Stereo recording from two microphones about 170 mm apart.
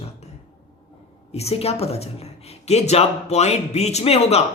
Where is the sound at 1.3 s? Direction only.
35° left (ahead or behind).